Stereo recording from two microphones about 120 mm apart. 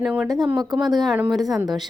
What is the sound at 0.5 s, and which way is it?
Speech, 35° right (ahead or behind).